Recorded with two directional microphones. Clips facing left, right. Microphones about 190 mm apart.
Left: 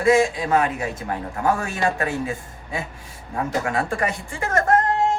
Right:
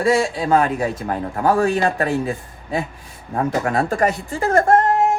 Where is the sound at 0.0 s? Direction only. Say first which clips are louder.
Even; 35° right (ahead or behind).